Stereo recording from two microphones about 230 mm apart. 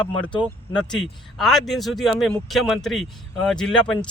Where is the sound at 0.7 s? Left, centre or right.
Centre.